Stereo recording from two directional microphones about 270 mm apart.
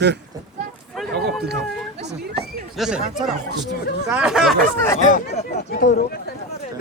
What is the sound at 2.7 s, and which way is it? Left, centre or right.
Speech, centre.